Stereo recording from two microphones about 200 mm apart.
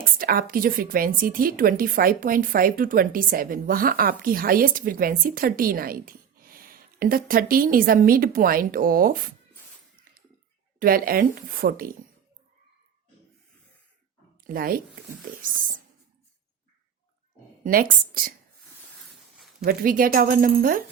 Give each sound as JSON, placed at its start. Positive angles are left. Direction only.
{"t": 0.0, "sound": "a woman's voice", "side_deg": -45}
{"t": 10.8, "sound": "a woman's voice", "side_deg": -45}
{"t": 14.4, "sound": "speech", "side_deg": -45}
{"t": 17.6, "sound": "a woman's voice", "side_deg": -45}
{"t": 19.6, "sound": "a woman's voice", "side_deg": -45}